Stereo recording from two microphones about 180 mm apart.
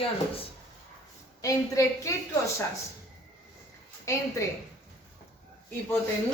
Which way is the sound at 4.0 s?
15° left (ahead or behind).